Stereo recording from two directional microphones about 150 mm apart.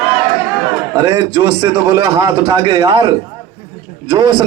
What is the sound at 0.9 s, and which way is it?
A man's voice, 25° right (ahead or behind).